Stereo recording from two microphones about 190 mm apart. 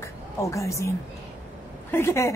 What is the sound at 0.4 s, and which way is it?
A woman's voice, 15° left (ahead or behind).